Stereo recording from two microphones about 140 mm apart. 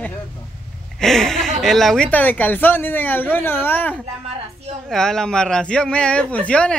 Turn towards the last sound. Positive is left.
turn(degrees=10)  # may be behind; listen again after turning